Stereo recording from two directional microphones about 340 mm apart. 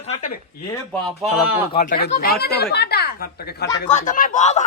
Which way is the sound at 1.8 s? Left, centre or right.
Left.